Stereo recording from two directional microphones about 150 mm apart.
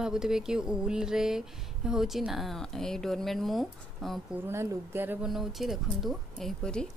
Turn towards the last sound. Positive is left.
turn(degrees=5)  # may be behind; listen again after turning